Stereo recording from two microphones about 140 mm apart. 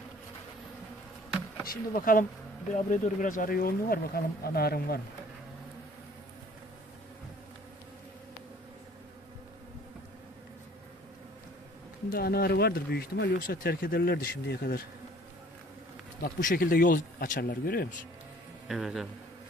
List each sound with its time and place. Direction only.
1.7 s speech: 90° left
2.7 s speech: 60° left (ahead or behind); by 5.0 s 90° left
12.1 s speech: 90° left
16.2 s speech: 85° left
18.7 s a man's voice: centre (ahead or behind)